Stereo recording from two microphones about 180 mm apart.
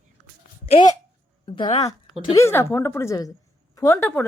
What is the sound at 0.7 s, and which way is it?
Speech, 25° left (ahead or behind).